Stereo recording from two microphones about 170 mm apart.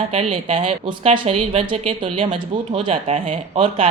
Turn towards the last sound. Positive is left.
turn(degrees=-35)  # may be behind; listen again after turning